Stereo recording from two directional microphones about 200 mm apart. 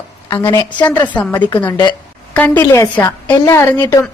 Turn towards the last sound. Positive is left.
turn(degrees=10)  # may be behind; listen again after turning